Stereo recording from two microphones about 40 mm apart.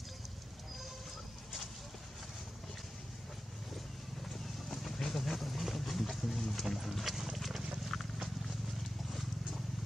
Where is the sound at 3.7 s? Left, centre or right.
Centre.